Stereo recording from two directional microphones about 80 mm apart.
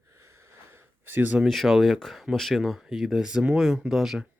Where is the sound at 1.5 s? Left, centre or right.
Centre.